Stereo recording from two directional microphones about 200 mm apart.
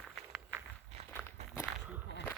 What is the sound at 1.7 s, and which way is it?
Walk, 5° right (ahead or behind).